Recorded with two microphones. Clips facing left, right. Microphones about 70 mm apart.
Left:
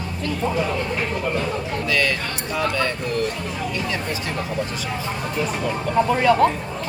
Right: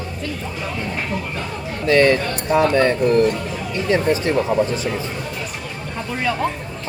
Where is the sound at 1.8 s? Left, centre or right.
Right.